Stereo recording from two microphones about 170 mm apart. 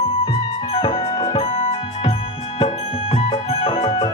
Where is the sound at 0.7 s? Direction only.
35° left (ahead or behind).